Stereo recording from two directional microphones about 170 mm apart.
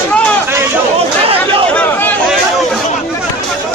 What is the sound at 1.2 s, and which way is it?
Chatter, 35° right (ahead or behind).